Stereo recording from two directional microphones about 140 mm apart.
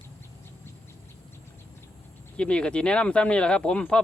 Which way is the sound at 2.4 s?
10° left (ahead or behind).